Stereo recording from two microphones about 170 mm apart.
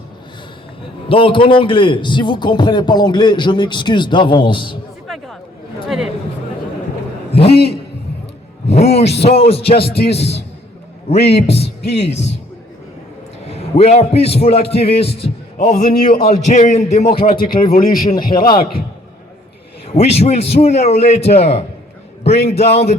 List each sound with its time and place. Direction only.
1.0 s a man's voice: 30° left (ahead or behind)
5.0 s chatter: centre (ahead or behind)
7.3 s a man's voice: 35° left (ahead or behind)
8.7 s a man's voice: 40° left (ahead or behind)
11.4 s a sound: 35° left (ahead or behind)
11.9 s a man's voice: 40° left (ahead or behind)
13.5 s a man's voice: 40° left (ahead or behind)
15.7 s a man's voice: 65° left (ahead or behind)
16.3 s a man's voice: 45° left (ahead or behind)
17.2 s a man's voice: 60° left (ahead or behind)
20.0 s a man's voice: 40° left (ahead or behind)